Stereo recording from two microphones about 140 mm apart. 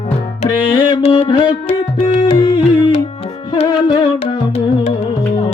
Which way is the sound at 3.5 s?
35° left (ahead or behind).